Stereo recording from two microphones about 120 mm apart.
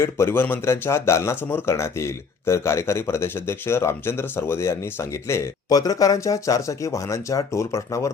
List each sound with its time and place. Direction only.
0.0 s speech: 20° left (ahead or behind)